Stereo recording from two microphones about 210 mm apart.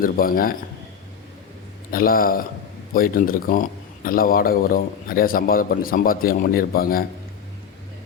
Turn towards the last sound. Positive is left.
turn(degrees=45)  # may be behind; listen again after turning